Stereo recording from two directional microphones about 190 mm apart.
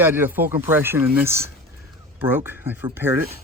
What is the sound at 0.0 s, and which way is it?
Speech, 10° right (ahead or behind).